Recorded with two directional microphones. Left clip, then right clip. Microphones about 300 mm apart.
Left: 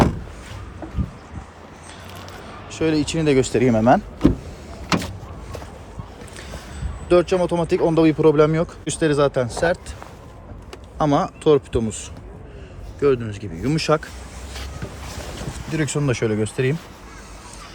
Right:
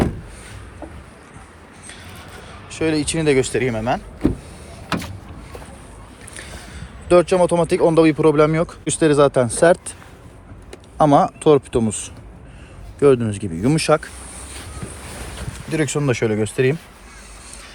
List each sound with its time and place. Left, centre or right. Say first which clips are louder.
2.5 s speech: even; centre
4.9 s vehicle: left 3 dB; left
7.1 s speech: right 3 dB; centre
10.9 s speech: right 6 dB; centre
15.7 s speech: right 3 dB; centre